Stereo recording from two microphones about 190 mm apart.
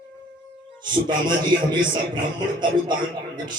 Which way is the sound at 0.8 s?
25° right (ahead or behind).